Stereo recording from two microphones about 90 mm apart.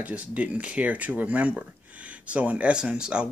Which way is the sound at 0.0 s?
15° right (ahead or behind).